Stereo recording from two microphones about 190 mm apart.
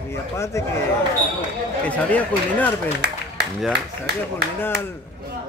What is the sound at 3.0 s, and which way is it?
Speech, 60° right (ahead or behind).